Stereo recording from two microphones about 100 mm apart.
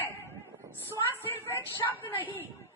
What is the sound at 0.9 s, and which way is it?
Speech, 20° left (ahead or behind).